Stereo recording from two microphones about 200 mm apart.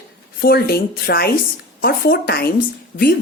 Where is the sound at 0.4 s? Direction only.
50° left (ahead or behind).